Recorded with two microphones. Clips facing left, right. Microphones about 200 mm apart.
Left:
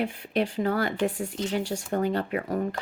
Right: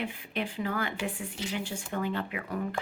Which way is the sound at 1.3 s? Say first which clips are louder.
Left 7 dB; 10° right (ahead or behind).